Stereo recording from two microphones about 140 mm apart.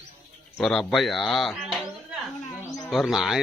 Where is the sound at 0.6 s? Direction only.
5° left (ahead or behind).